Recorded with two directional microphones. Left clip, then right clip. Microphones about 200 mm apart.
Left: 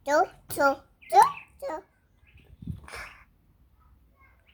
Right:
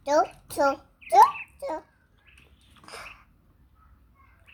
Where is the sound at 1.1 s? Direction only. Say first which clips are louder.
Right 2 dB; 10° left (ahead or behind).